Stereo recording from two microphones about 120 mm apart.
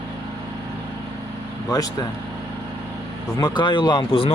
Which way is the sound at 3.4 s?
40° left (ahead or behind).